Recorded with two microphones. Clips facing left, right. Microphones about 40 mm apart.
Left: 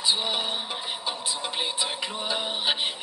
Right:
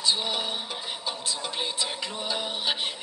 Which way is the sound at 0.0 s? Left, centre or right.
Centre.